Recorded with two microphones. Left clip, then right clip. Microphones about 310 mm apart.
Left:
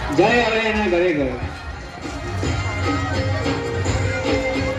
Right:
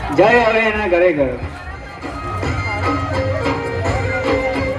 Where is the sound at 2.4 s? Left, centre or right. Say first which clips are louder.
Right 4 dB; right.